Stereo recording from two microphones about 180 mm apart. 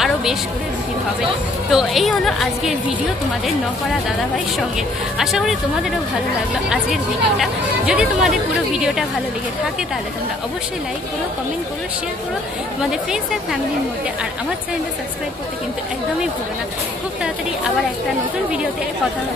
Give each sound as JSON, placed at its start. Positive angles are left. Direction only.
{"t": 0.0, "sound": "a sound", "side_deg": 0}
{"t": 1.7, "sound": "speech", "side_deg": 0}
{"t": 4.7, "sound": "speech", "side_deg": 0}
{"t": 6.7, "sound": "speech", "side_deg": 0}